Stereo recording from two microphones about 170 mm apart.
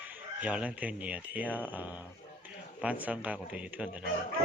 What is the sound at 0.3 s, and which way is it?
Speech, 5° right (ahead or behind).